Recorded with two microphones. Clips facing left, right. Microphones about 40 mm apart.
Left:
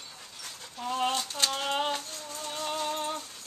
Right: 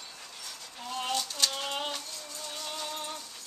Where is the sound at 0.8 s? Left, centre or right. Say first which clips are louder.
Left 4 dB; centre.